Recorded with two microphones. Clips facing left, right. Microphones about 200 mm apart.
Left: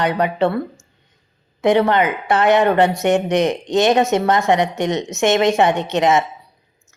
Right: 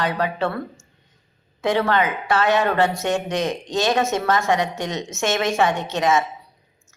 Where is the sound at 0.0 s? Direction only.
20° left (ahead or behind).